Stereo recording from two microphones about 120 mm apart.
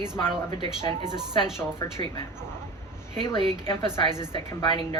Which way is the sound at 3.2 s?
45° left (ahead or behind).